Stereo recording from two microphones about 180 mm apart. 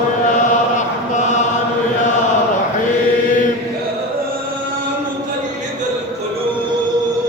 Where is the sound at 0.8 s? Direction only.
40° left (ahead or behind).